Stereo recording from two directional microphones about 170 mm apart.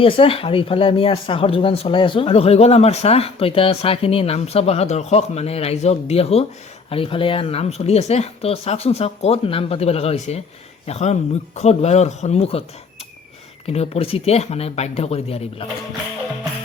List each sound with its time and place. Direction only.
0.0 s speech: 30° left (ahead or behind)
13.7 s speech: 35° left (ahead or behind)